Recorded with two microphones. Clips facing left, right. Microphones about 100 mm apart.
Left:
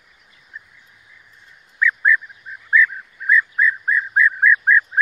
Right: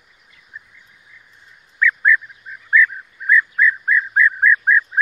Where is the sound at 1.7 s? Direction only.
15° left (ahead or behind).